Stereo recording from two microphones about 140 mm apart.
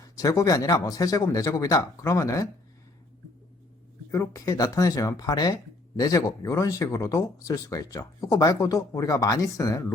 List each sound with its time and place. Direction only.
0.0 s speech: 25° left (ahead or behind)
4.1 s speech: 20° left (ahead or behind)